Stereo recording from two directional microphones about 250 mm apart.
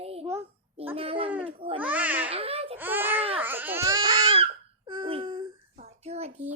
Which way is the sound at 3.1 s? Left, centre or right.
Right.